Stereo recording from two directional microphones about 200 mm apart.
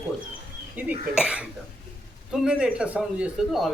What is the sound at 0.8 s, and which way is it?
A man's voice, 5° right (ahead or behind).